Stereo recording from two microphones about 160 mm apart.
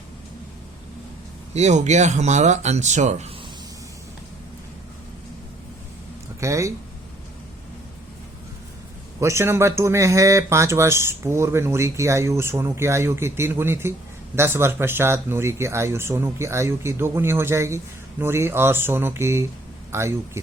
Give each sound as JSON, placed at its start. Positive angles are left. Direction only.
{"t": 1.5, "sound": "speech", "side_deg": -45}
{"t": 6.4, "sound": "speech", "side_deg": -20}
{"t": 9.2, "sound": "speech", "side_deg": -15}